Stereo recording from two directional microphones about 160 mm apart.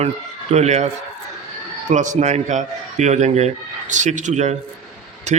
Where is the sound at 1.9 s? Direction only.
50° right (ahead or behind).